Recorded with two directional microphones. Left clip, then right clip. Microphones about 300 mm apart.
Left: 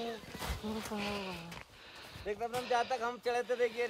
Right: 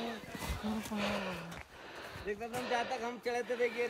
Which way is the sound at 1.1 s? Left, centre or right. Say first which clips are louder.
Right 2 dB; left.